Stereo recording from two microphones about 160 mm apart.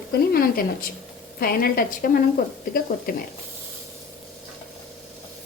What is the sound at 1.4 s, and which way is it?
Speech, 70° left (ahead or behind).